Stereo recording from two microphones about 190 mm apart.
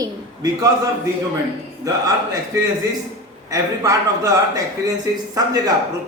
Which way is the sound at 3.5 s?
20° right (ahead or behind).